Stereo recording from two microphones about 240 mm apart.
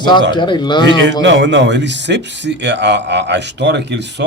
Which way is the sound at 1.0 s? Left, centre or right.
Right.